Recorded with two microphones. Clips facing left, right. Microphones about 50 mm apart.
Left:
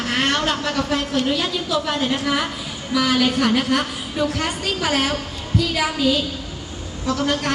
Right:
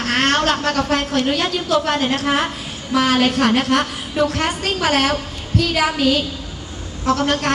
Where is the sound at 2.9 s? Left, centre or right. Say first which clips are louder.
Right 3 dB; right.